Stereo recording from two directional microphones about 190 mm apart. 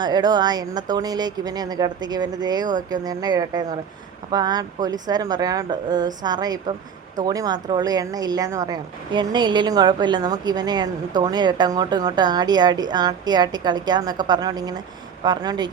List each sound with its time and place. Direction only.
0.0 s speech: 20° right (ahead or behind)